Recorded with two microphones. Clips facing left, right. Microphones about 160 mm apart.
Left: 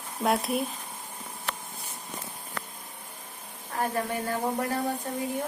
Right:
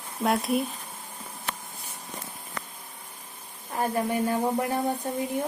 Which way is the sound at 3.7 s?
15° right (ahead or behind).